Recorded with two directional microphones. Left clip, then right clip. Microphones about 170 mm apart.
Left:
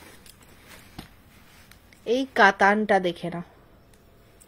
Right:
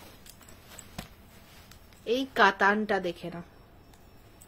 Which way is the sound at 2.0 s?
35° left (ahead or behind).